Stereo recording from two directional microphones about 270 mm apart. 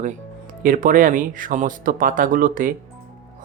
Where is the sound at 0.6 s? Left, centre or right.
Right.